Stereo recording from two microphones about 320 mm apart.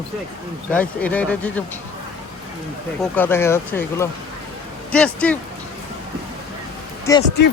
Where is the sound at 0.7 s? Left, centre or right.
Centre.